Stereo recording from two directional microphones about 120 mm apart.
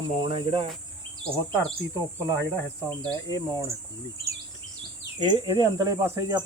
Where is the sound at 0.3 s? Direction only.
50° right (ahead or behind).